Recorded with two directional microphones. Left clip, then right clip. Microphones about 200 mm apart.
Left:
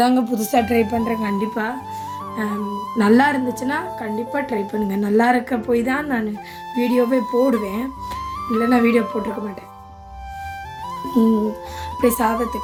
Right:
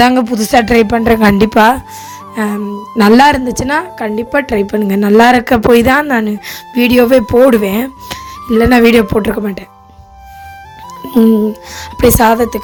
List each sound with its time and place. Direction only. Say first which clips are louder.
0.0 s speech: right 8 dB; 40° right (ahead or behind)
2.3 s music: right 10 dB; 45° right (ahead or behind)
2.6 s speech: right 3 dB; centre (ahead or behind)
3.0 s a woman's voice: right 9 dB; 40° right (ahead or behind)
11.9 s speech: right 10 dB; 45° right (ahead or behind)